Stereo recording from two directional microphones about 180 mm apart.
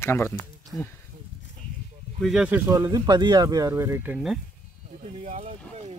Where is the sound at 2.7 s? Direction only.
20° right (ahead or behind); by 4.4 s 5° right (ahead or behind).